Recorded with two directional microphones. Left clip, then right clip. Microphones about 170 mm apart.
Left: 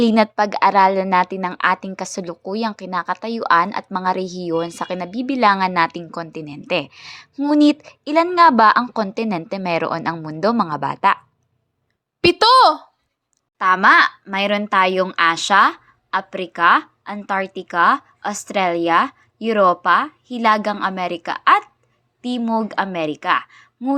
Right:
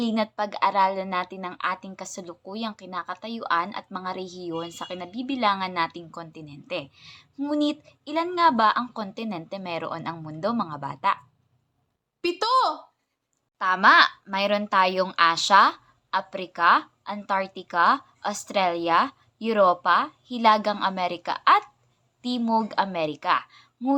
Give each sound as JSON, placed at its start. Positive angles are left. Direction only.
{"t": 0.0, "sound": "a woman's voice", "side_deg": 50}
{"t": 12.2, "sound": "a woman's voice", "side_deg": 65}
{"t": 13.6, "sound": "a woman's voice", "side_deg": 25}